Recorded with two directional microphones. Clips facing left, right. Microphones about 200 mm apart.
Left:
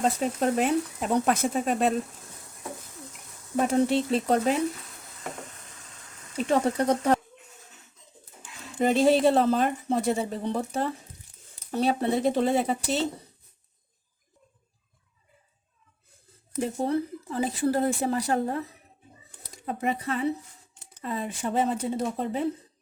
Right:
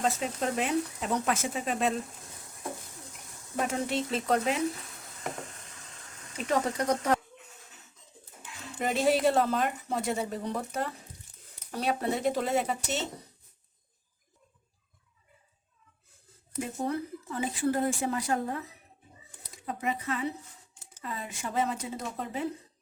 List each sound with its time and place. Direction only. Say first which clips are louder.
0.0 s a woman's voice: left 5 dB; 40° left (ahead or behind)
3.6 s a woman's voice: left 7 dB; 30° left (ahead or behind)
6.3 s a woman's voice: left 5 dB; 30° left (ahead or behind)
8.8 s a woman's voice: left 5 dB; 30° left (ahead or behind)
16.6 s a woman's voice: left 5 dB; 30° left (ahead or behind)
19.9 s a woman's voice: left 5 dB; 35° left (ahead or behind)